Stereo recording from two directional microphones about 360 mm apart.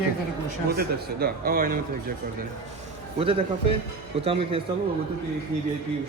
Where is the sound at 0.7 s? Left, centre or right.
Right.